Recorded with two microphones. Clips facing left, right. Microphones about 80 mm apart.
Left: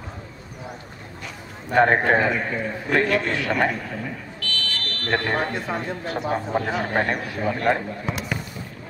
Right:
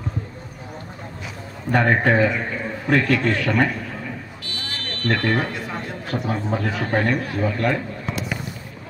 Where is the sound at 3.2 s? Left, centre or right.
Right.